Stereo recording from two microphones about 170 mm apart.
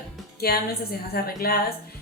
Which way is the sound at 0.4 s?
65° left (ahead or behind).